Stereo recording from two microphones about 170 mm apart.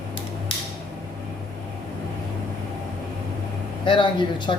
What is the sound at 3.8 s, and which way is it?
Speech, 30° left (ahead or behind).